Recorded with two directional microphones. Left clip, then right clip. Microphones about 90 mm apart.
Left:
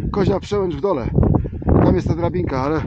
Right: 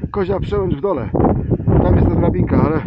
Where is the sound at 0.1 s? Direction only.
40° left (ahead or behind).